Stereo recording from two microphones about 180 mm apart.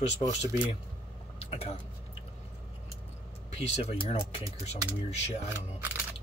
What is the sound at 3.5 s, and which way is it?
Speech, 35° left (ahead or behind).